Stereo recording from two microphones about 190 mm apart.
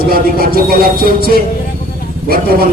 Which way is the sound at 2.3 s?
55° right (ahead or behind).